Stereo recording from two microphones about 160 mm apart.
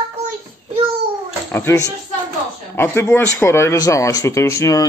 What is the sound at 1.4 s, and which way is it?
Speech, 15° left (ahead or behind).